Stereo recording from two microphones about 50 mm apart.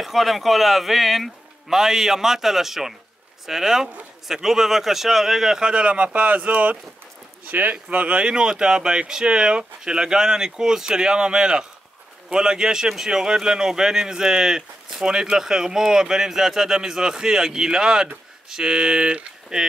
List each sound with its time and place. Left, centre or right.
0.0 s a man's voice: centre